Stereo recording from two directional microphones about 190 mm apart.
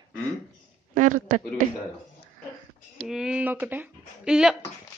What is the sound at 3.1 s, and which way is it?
Speech, 5° right (ahead or behind).